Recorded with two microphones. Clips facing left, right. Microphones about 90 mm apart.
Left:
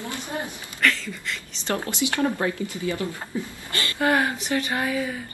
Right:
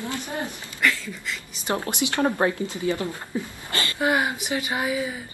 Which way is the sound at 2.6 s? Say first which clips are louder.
Right 2 dB; 20° right (ahead or behind).